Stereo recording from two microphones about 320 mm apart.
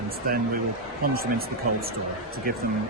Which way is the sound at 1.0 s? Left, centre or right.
Right.